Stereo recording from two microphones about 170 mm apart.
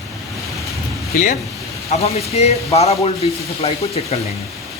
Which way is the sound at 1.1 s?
50° left (ahead or behind).